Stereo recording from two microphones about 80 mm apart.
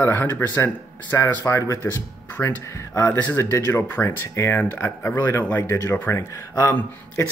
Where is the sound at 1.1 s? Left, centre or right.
Left.